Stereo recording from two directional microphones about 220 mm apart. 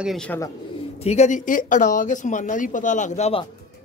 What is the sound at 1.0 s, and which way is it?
Speech, 30° left (ahead or behind).